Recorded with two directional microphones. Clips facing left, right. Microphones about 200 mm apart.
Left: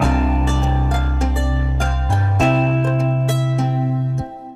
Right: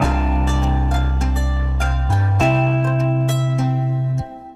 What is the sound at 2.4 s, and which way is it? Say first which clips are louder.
Music: left 1 dB; centre (ahead or behind).